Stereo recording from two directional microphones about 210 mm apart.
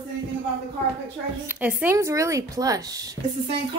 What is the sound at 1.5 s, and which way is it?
A woman's voice, 5° right (ahead or behind).